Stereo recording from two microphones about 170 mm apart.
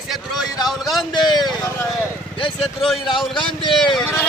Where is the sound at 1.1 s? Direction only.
25° left (ahead or behind).